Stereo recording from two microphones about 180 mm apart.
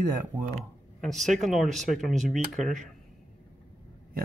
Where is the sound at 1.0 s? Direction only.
Centre (ahead or behind).